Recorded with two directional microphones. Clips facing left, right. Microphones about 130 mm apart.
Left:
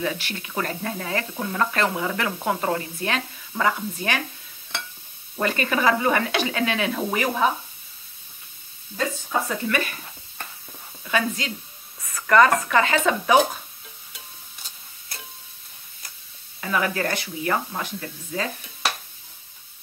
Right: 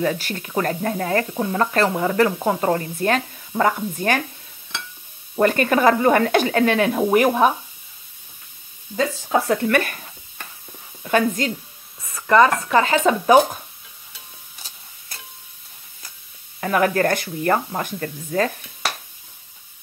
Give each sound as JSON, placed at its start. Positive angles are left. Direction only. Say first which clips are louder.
{"t": 0.0, "sound": "speech", "louder": "right 5 dB", "side_deg": -45}
{"t": 1.3, "sound": "speech", "louder": "right 6 dB", "side_deg": -25}
{"t": 1.6, "sound": "speech", "louder": "right 4 dB", "side_deg": -35}
{"t": 5.3, "sound": "speech", "louder": "right 7 dB", "side_deg": -50}
{"t": 8.9, "sound": "speech", "louder": "right 5 dB", "side_deg": -80}
{"t": 11.1, "sound": "speech", "louder": "right 6 dB", "side_deg": -45}
{"t": 12.0, "sound": "speech", "louder": "right 2 dB", "side_deg": -25}
{"t": 16.6, "sound": "speech", "louder": "right 6 dB", "side_deg": -55}